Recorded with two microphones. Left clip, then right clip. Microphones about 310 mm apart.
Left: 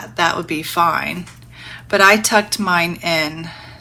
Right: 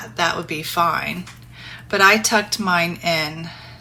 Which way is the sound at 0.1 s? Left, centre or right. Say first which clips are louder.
Left 4 dB; left.